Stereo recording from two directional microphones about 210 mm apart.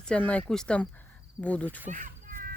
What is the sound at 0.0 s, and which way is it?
Speech, 5° left (ahead or behind).